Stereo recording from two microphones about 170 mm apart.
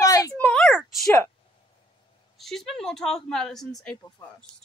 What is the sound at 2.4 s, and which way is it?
A woman's voice, centre (ahead or behind).